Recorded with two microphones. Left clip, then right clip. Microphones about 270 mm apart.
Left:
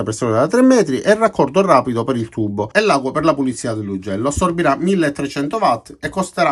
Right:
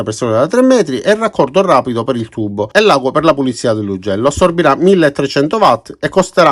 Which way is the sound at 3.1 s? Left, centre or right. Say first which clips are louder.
Right 5 dB; centre.